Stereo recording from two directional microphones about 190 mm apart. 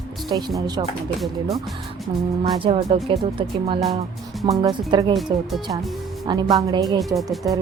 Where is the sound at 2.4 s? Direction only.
30° right (ahead or behind).